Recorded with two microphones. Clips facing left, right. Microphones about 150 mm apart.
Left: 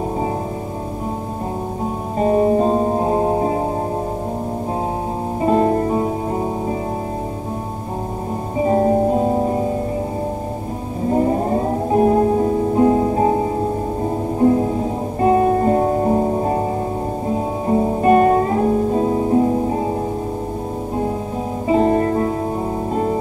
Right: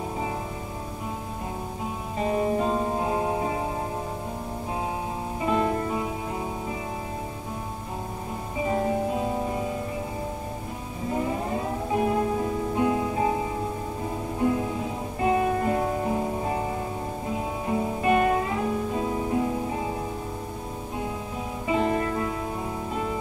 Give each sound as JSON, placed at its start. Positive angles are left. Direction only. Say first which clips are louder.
{"t": 2.1, "sound": "music", "louder": "left 10 dB", "side_deg": 40}
{"t": 5.4, "sound": "music", "louder": "left 9 dB", "side_deg": 40}
{"t": 8.5, "sound": "music", "louder": "left 10 dB", "side_deg": 40}
{"t": 11.1, "sound": "music", "louder": "left 10 dB", "side_deg": 40}
{"t": 21.6, "sound": "music", "louder": "left 9 dB", "side_deg": 40}